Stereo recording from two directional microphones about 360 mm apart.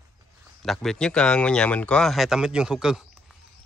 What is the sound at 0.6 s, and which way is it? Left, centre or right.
Speech, centre.